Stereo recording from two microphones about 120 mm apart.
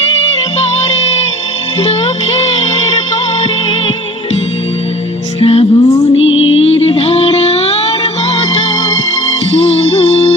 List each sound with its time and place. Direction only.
0.9 s music: 60° left (ahead or behind)
5.4 s music: 55° left (ahead or behind)
5.7 s music: 30° left (ahead or behind)
6.6 s music: 55° left (ahead or behind)
9.6 s music: 55° left (ahead or behind)